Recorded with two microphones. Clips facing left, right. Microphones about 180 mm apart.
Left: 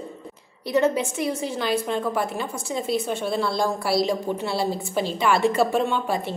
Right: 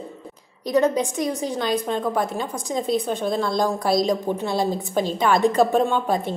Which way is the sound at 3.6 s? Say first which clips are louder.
Right 3 dB; 20° right (ahead or behind).